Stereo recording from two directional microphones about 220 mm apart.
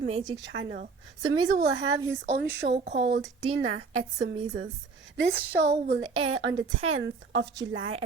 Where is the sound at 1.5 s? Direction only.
60° right (ahead or behind).